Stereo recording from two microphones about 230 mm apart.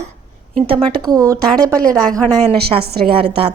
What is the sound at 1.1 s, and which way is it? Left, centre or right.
Speech, centre.